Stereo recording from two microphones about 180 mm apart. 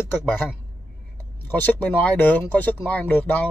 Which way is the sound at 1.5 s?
10° left (ahead or behind).